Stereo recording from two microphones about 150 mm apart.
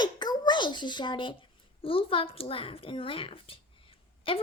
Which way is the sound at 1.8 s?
35° left (ahead or behind).